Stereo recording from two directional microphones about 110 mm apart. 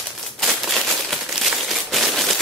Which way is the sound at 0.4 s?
Centre (ahead or behind).